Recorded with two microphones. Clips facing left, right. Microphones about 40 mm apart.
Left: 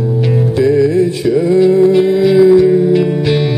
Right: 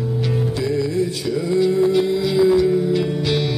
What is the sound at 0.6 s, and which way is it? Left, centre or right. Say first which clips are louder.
Music: left 12 dB; left.